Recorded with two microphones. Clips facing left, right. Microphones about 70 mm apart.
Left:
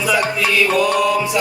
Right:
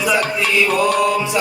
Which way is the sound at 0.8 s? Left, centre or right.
Right.